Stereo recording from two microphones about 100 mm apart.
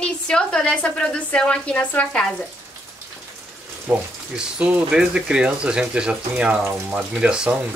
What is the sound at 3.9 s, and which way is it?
Speech, 15° right (ahead or behind).